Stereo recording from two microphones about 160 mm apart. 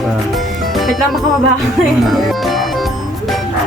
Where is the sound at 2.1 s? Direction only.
Centre (ahead or behind).